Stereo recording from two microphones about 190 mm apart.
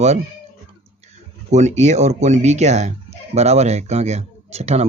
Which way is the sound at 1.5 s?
35° right (ahead or behind).